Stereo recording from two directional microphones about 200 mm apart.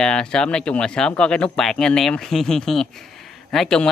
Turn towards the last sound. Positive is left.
turn(degrees=0)  # may be behind; listen again after turning